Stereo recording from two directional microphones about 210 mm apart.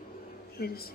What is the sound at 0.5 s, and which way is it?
Speech, 45° left (ahead or behind).